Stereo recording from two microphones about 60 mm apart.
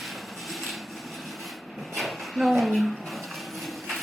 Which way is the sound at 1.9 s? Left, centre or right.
Centre.